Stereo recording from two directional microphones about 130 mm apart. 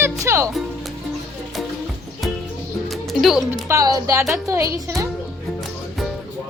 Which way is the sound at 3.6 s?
25° right (ahead or behind).